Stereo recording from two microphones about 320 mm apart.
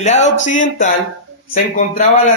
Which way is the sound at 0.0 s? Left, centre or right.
Left.